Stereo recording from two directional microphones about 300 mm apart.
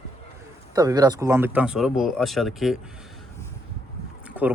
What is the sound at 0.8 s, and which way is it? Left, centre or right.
Speech, centre.